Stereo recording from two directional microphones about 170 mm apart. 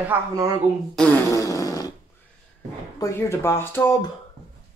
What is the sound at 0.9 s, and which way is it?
Fart, 5° left (ahead or behind).